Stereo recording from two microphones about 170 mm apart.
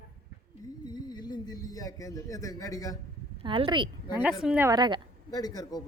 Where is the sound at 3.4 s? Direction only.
30° right (ahead or behind).